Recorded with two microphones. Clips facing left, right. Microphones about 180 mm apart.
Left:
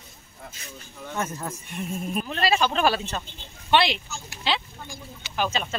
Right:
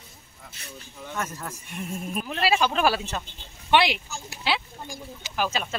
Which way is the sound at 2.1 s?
5° right (ahead or behind).